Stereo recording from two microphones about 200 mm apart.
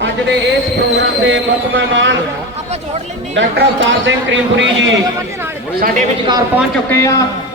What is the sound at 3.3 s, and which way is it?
A man's voice, 65° right (ahead or behind).